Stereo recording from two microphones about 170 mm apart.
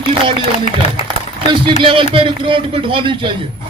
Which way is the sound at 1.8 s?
30° right (ahead or behind).